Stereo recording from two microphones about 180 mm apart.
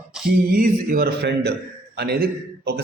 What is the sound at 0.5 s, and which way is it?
A man's voice, 50° right (ahead or behind).